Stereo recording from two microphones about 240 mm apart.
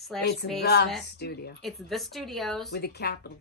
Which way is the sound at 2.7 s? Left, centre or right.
Left.